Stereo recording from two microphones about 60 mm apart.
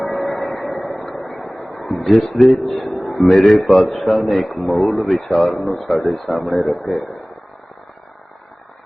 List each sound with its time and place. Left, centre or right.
0.0 s a sound: centre
2.5 s a man's voice: centre
3.3 s a man's voice: centre
3.6 s a man's voice: centre